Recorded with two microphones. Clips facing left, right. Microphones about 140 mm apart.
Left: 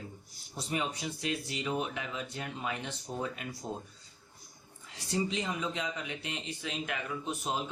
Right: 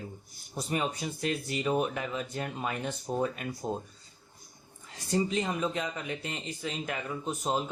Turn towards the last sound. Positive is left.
turn(degrees=-40)  # may be behind; listen again after turning